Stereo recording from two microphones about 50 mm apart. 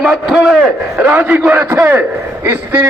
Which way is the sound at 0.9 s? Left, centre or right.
Right.